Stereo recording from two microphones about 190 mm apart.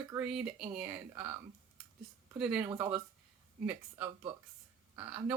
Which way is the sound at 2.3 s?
5° right (ahead or behind).